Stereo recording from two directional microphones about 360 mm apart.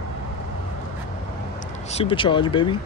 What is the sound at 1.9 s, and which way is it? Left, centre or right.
Speech, centre.